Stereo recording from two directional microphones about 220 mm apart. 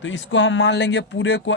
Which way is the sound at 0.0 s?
60° left (ahead or behind).